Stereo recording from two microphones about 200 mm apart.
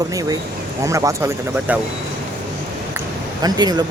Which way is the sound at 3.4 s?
20° right (ahead or behind).